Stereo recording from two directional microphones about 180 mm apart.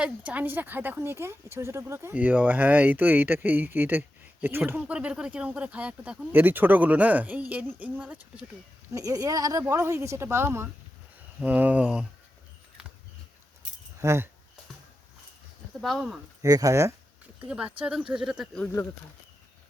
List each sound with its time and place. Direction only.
0.0 s a woman's voice: 10° right (ahead or behind)
8.9 s a woman's voice: 20° right (ahead or behind)
14.0 s a woman's voice: 15° right (ahead or behind)
15.8 s speech: centre (ahead or behind)
16.4 s a woman's voice: 20° right (ahead or behind); by 18.6 s 5° right (ahead or behind)
18.6 s speech: 10° left (ahead or behind)